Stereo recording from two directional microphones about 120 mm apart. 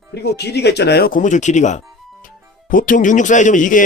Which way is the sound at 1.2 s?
90° left.